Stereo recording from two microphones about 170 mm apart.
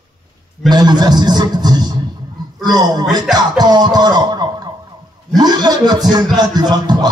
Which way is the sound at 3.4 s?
25° right (ahead or behind).